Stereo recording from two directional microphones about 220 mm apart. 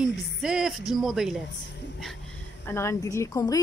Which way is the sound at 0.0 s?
5° right (ahead or behind).